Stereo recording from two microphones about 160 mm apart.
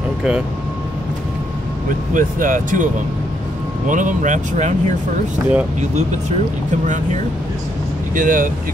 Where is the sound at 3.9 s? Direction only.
55° right (ahead or behind).